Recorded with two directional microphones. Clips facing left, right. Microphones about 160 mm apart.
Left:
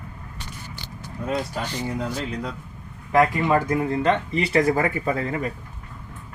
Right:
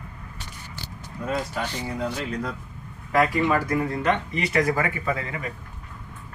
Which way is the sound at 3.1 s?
20° left (ahead or behind).